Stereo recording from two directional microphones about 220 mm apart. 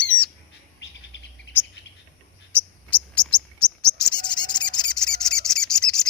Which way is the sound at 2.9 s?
5° left (ahead or behind).